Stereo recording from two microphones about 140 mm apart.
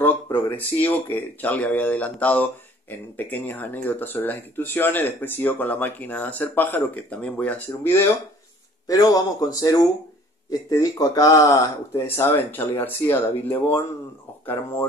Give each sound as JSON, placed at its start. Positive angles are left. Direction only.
{"t": 0.0, "sound": "speech", "side_deg": 15}
{"t": 8.8, "sound": "speech", "side_deg": 25}
{"t": 11.9, "sound": "speech", "side_deg": 15}